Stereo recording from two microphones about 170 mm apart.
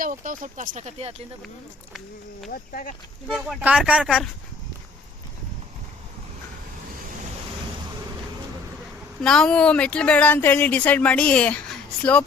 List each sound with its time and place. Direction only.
0.0 s speech: 50° right (ahead or behind)
2.5 s speech: 55° left (ahead or behind)
3.2 s speech: centre (ahead or behind)
9.2 s speech: 5° left (ahead or behind)